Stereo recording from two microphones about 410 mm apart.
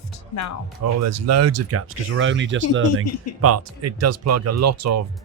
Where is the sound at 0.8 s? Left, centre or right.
Right.